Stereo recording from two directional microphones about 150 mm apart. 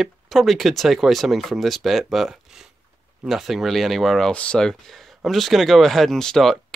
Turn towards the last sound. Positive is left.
turn(degrees=5)  # may be behind; listen again after turning